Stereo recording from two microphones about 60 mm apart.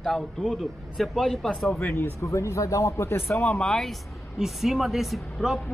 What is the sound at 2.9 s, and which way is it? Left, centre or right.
Speech, left.